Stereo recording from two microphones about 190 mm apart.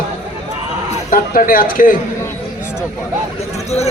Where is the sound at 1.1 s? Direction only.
45° left (ahead or behind).